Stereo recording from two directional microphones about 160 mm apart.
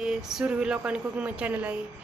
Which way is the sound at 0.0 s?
5° right (ahead or behind).